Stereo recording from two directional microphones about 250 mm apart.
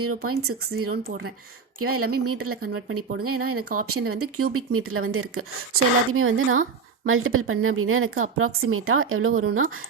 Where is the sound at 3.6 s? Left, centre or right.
Right.